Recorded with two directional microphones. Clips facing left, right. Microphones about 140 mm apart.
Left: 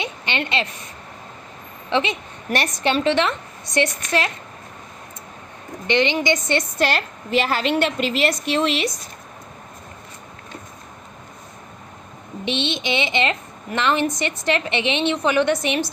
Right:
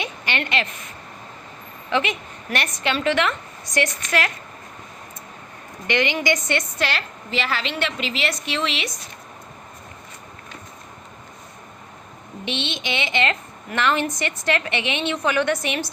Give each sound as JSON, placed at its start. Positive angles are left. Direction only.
{"t": 0.0, "sound": "a woman's voice", "side_deg": 25}
{"t": 1.9, "sound": "a woman's voice", "side_deg": 25}
{"t": 5.9, "sound": "a woman's voice", "side_deg": 25}
{"t": 12.5, "sound": "a woman's voice", "side_deg": 25}